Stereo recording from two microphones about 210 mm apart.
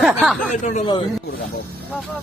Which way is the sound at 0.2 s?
Centre (ahead or behind).